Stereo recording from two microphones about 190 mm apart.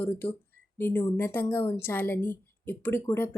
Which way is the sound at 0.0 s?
10° left (ahead or behind).